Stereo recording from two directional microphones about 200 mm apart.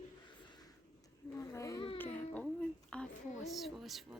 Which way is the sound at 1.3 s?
15° left (ahead or behind).